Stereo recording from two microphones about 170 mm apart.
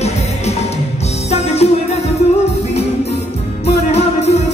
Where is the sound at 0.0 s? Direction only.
40° left (ahead or behind).